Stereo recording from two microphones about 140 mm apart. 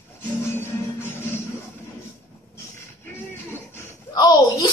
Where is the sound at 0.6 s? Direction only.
15° left (ahead or behind).